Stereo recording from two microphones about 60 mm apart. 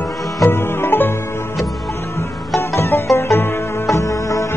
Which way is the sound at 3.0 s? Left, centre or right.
Left.